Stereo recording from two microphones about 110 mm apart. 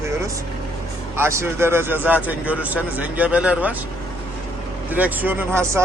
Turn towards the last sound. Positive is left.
turn(degrees=-20)  # may be behind; listen again after turning